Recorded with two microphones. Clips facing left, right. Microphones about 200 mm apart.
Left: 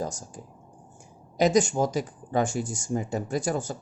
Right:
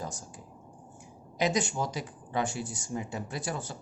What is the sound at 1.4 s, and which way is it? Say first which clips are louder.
A woman's voice: left 7 dB; 45° left (ahead or behind).